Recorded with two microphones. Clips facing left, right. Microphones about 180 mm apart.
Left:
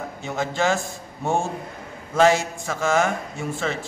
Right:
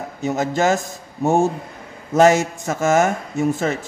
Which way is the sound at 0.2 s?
40° right (ahead or behind).